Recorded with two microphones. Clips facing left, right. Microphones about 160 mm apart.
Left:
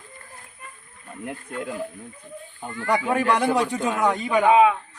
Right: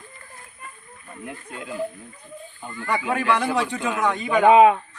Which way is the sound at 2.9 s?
40° left (ahead or behind).